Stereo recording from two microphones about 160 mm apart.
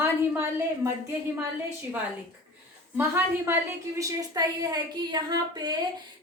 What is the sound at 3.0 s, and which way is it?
A woman's voice, 15° right (ahead or behind).